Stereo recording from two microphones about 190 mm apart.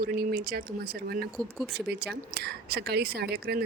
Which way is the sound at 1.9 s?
60° right (ahead or behind).